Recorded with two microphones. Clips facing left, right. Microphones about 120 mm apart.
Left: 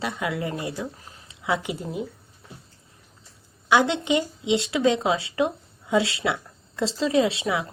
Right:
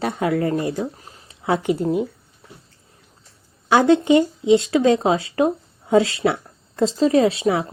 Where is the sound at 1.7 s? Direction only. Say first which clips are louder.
Right 10 dB; 55° right (ahead or behind).